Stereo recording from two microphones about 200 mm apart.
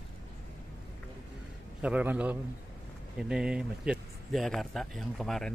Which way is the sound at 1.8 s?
5° right (ahead or behind).